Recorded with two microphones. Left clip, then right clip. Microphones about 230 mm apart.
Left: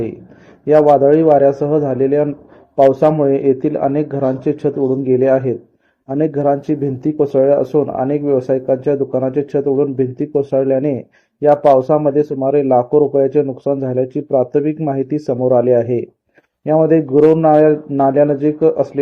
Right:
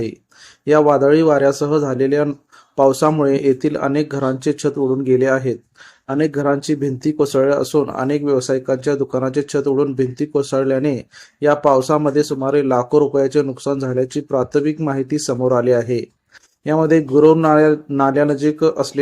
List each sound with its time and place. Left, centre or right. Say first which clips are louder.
0.6 s speech: left 3 dB; centre
16.6 s speech: left 3 dB; centre